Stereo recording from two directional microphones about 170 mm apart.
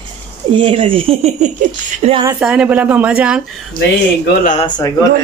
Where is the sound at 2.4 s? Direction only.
5° right (ahead or behind).